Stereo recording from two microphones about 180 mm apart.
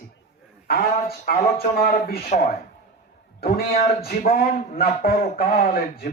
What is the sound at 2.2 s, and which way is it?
Speech, 45° left (ahead or behind).